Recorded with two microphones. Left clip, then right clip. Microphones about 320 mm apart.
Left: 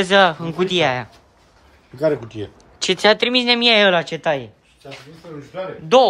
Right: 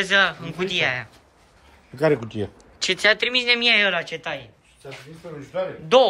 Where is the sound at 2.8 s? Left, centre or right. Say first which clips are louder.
Left 4 dB; centre.